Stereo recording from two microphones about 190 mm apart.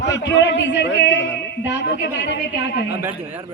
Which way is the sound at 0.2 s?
65° left (ahead or behind).